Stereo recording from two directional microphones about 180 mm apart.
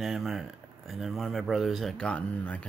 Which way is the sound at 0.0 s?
Centre (ahead or behind).